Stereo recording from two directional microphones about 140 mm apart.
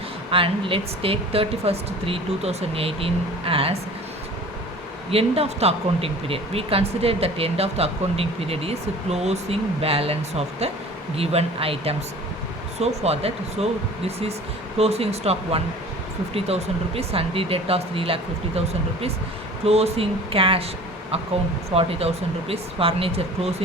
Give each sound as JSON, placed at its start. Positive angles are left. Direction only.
{"t": 0.3, "sound": "speech", "side_deg": -40}
{"t": 5.1, "sound": "speech", "side_deg": -45}
{"t": 14.8, "sound": "speech", "side_deg": -45}
{"t": 21.8, "sound": "speech", "side_deg": -45}